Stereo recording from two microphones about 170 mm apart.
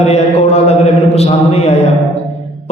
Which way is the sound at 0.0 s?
40° left (ahead or behind).